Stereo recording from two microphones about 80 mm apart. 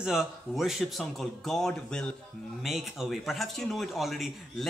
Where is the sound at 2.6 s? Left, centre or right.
Centre.